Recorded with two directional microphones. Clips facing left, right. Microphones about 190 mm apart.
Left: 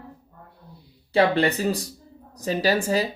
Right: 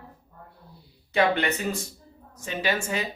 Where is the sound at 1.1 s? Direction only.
35° left (ahead or behind).